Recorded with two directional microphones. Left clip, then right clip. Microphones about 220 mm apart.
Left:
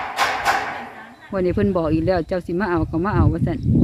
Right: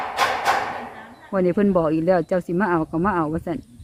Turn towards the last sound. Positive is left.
turn(degrees=0)  # may be behind; listen again after turning